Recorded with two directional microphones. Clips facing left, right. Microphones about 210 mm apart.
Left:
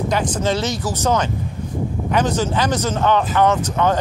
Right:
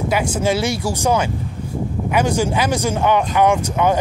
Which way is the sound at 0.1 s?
10° right (ahead or behind).